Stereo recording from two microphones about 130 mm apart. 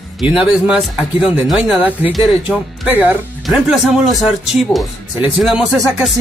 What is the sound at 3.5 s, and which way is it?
Speech, centre (ahead or behind).